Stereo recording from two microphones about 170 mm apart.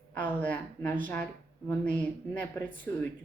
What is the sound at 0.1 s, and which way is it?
Speech, 10° left (ahead or behind).